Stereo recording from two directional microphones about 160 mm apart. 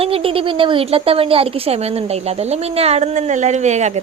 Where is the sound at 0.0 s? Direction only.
35° right (ahead or behind).